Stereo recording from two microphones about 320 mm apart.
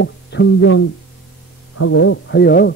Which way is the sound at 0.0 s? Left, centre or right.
Left.